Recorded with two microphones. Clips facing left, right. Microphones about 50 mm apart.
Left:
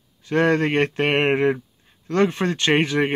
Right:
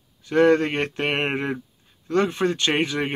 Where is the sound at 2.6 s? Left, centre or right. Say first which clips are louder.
Left 3 dB; left.